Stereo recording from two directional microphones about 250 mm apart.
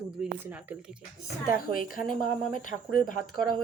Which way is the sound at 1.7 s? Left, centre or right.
Left.